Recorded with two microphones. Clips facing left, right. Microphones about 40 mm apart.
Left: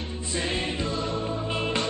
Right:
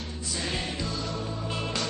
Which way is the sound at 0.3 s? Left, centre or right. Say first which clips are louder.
Left 4 dB; left.